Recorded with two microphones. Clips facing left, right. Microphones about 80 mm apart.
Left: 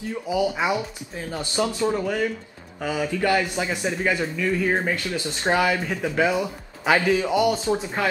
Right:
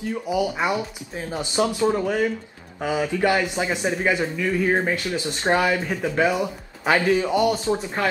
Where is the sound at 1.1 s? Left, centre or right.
Centre.